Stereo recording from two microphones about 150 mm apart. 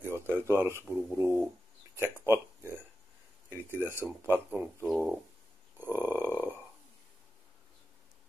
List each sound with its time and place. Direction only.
0.0 s speech: 15° right (ahead or behind)
3.8 s speech: 15° right (ahead or behind)
4.9 s speech: centre (ahead or behind)
5.8 s a sound: 15° right (ahead or behind)